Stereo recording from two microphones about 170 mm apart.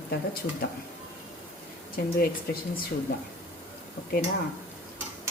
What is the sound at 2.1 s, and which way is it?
Speech, 60° left (ahead or behind).